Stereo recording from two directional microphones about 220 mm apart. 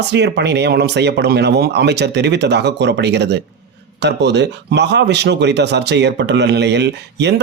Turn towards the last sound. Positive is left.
turn(degrees=-50)  # may be behind; listen again after turning